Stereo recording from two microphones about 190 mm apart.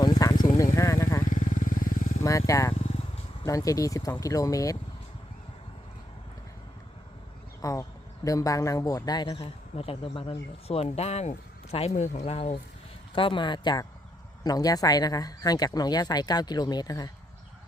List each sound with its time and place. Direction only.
0.0 s a sound: 20° left (ahead or behind)
0.6 s vehicle: 15° left (ahead or behind)
1.3 s motorcycle: 40° left (ahead or behind)
2.5 s speech: 15° left (ahead or behind)
7.6 s speech: 15° left (ahead or behind)